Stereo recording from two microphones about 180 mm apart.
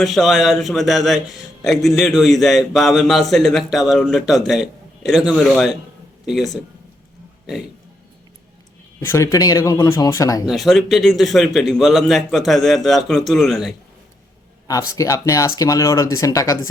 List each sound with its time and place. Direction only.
0.0 s a man's voice: centre (ahead or behind)
9.0 s speech: 15° left (ahead or behind)
10.4 s a man's voice: centre (ahead or behind)
14.7 s speech: 20° left (ahead or behind)